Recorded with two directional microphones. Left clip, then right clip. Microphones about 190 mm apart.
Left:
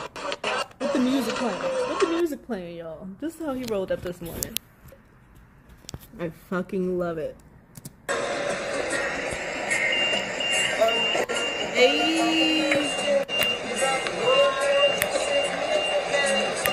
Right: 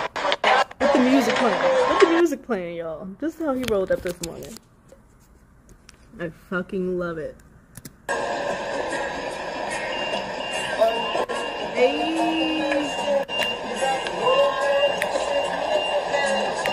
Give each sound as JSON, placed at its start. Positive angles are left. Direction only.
{"t": 0.0, "sound": "a sound", "side_deg": 30}
{"t": 2.2, "sound": "a woman's voice", "side_deg": -10}
{"t": 6.1, "sound": "speech", "side_deg": 0}
{"t": 8.1, "sound": "music", "side_deg": 15}